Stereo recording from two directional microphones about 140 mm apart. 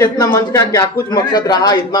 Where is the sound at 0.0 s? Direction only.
30° left (ahead or behind).